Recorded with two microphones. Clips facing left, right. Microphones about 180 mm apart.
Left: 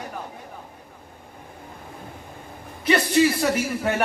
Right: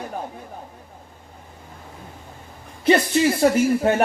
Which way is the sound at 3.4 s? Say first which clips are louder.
Right 6 dB; 30° right (ahead or behind).